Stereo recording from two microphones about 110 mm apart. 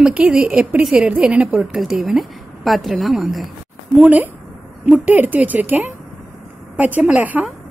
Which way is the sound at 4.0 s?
15° right (ahead or behind).